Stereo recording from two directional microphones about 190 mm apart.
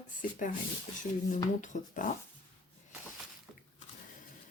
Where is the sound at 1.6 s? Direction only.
40° left (ahead or behind).